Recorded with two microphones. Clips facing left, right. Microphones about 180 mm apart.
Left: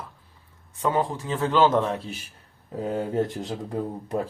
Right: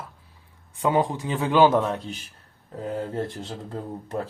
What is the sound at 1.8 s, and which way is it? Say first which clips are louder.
Speech: even; centre (ahead or behind).